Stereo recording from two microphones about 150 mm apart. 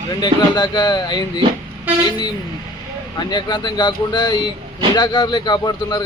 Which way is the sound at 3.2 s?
30° left (ahead or behind).